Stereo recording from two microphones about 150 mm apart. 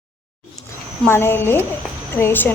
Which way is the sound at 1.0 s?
15° left (ahead or behind).